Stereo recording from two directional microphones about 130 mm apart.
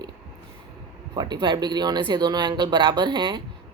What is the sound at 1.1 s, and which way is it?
Speech, 35° right (ahead or behind).